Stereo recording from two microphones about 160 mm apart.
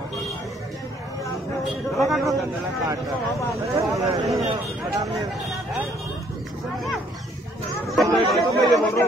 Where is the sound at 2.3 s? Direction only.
20° right (ahead or behind).